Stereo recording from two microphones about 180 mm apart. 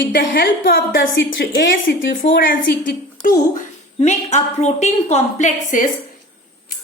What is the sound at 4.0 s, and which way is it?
A woman's voice, 40° left (ahead or behind).